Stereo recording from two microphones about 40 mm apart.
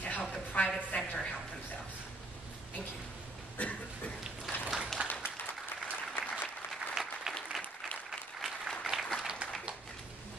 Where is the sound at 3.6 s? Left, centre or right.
Left.